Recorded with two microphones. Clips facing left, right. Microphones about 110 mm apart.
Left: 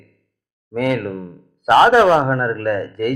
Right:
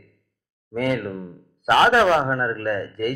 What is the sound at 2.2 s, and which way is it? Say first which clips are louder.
Speech: left 4 dB; 65° left (ahead or behind).